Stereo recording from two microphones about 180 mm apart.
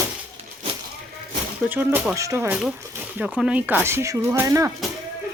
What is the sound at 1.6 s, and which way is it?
Speech, 10° right (ahead or behind).